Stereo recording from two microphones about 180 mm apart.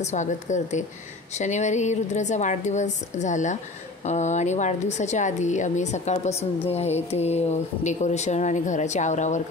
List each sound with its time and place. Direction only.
0.0 s speech: 40° left (ahead or behind)